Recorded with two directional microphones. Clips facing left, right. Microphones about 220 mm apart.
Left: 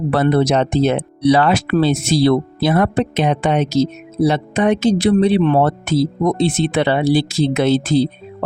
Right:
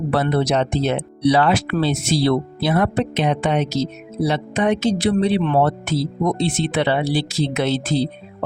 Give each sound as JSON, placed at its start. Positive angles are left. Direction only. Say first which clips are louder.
{"t": 0.1, "sound": "speech", "louder": "left 4 dB", "side_deg": 50}